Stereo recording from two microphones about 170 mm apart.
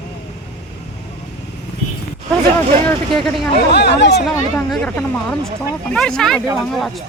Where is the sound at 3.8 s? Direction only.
85° left.